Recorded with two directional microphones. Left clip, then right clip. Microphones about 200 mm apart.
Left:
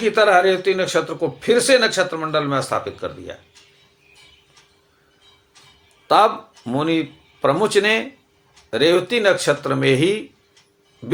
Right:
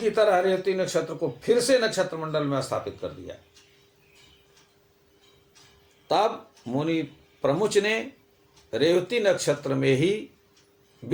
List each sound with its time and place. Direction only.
0.0 s a man's voice: 15° left (ahead or behind)
6.1 s a man's voice: 10° left (ahead or behind)